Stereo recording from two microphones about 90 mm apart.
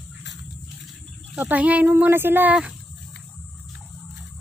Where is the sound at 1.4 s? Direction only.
15° right (ahead or behind).